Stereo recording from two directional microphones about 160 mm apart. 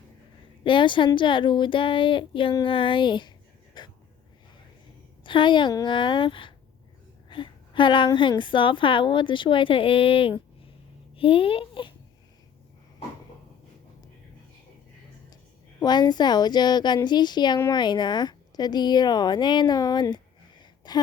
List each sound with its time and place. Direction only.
0.6 s a woman's voice: 30° left (ahead or behind)
3.8 s a sound: 25° left (ahead or behind)
5.2 s a woman's voice: 30° left (ahead or behind)
15.8 s speech: 25° left (ahead or behind)